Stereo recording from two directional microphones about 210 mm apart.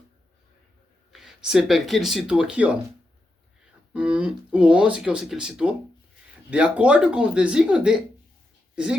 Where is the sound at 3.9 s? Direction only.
5° right (ahead or behind).